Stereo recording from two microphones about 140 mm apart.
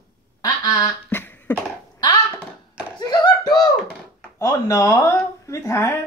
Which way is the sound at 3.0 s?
30° left (ahead or behind).